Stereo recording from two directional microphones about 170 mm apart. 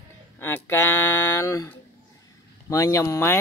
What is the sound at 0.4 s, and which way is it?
Speech, 15° left (ahead or behind).